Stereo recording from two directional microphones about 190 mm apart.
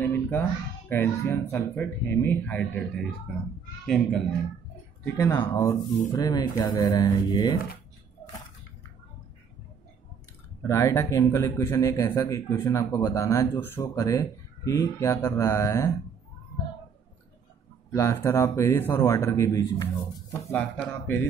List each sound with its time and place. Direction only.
0.0 s a sound: 10° left (ahead or behind)
0.8 s a man's voice: 10° left (ahead or behind)
5.0 s speech: 15° left (ahead or behind)
10.7 s a man's voice: 15° left (ahead or behind)
17.9 s a man's voice: 15° left (ahead or behind)